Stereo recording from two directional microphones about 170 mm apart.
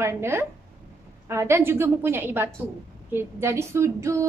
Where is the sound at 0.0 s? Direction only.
15° right (ahead or behind).